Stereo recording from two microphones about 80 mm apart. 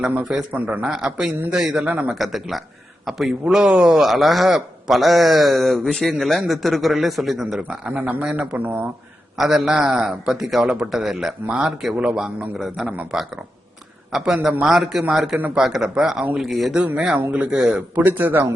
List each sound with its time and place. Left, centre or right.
0.0 s speech: centre
0.9 s speech: centre
2.1 s a man's voice: centre
7.7 s speech: centre
9.4 s a man's voice: centre
11.4 s speech: centre
12.5 s a man's voice: centre
16.7 s speech: centre
17.9 s speech: right